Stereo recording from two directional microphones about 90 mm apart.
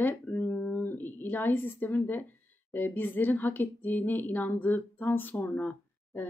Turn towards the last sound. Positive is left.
turn(degrees=20)  # may be behind; listen again after turning